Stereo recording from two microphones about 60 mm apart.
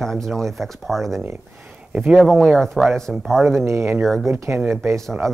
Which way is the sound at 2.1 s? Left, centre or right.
Centre.